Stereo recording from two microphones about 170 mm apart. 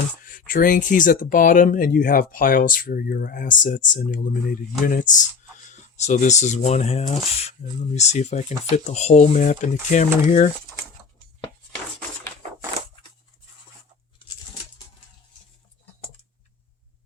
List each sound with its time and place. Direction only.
0.3 s speech: 55° left (ahead or behind)